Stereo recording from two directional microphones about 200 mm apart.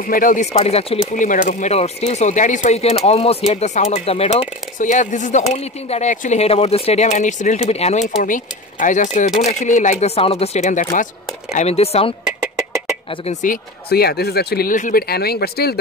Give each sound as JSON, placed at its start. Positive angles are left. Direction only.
{"t": 0.1, "sound": "speech", "side_deg": 40}
{"t": 1.1, "sound": "speech", "side_deg": 40}
{"t": 12.3, "sound": "a sound", "side_deg": -5}
{"t": 13.3, "sound": "speech", "side_deg": 40}